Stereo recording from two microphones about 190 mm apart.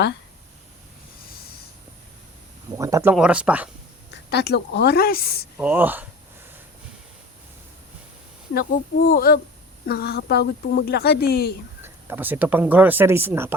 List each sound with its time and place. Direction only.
2.7 s speech: 15° right (ahead or behind)
4.1 s speech: 60° left (ahead or behind)
5.5 s speech: 10° right (ahead or behind)
9.0 s speech: 50° left (ahead or behind)
11.8 s speech: 10° right (ahead or behind)